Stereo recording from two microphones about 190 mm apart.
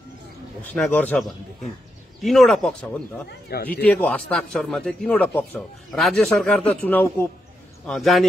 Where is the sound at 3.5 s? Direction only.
55° left (ahead or behind).